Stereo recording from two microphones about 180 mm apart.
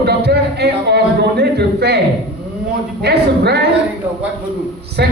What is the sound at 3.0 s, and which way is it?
Speech, 65° right (ahead or behind).